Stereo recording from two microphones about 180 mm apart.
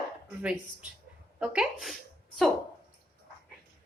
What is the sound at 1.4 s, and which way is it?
A woman's voice, 5° right (ahead or behind).